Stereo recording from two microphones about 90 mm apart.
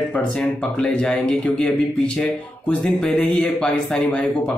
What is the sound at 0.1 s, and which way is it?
Speech, 10° left (ahead or behind).